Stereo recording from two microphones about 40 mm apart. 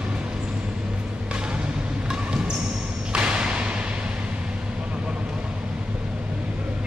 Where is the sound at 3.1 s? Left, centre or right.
Right.